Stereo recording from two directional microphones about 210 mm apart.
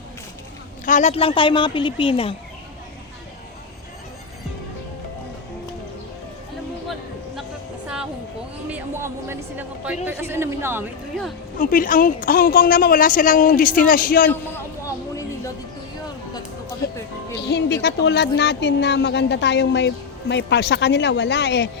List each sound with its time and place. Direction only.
0.9 s a woman's voice: 35° left (ahead or behind)
8.7 s a sound: 10° right (ahead or behind)
11.6 s a woman's voice: 40° left (ahead or behind)
17.4 s speech: 55° left (ahead or behind)